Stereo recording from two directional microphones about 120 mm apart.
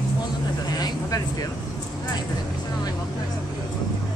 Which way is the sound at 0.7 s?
30° left (ahead or behind).